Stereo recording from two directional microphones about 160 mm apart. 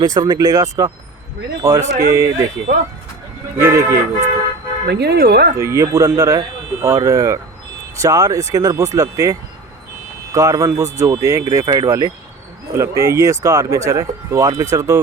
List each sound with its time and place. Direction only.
0.0 s speech: 25° right (ahead or behind)
2.7 s speech: 55° right (ahead or behind)
3.6 s speech: 20° right (ahead or behind)
4.9 s speech: 90° right
5.5 s speech: 20° right (ahead or behind)